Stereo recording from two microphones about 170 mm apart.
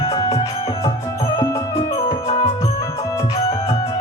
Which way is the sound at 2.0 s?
35° left (ahead or behind).